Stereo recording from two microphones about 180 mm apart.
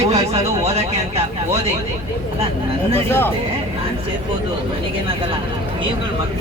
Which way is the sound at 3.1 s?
10° left (ahead or behind).